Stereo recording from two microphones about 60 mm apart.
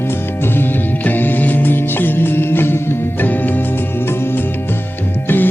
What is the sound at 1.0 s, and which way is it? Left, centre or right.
Music, left.